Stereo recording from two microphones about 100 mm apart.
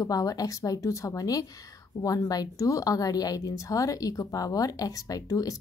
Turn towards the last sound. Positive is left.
turn(degrees=35)  # may be behind; listen again after turning